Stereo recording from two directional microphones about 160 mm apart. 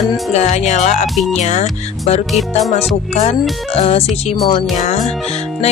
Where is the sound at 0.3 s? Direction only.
45° left (ahead or behind).